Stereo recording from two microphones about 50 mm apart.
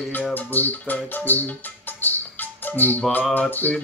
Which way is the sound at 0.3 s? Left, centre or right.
Left.